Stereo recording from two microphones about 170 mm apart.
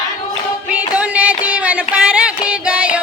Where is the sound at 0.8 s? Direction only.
10° right (ahead or behind).